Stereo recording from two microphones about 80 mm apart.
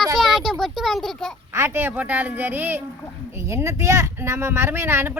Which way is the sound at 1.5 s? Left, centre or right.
Right.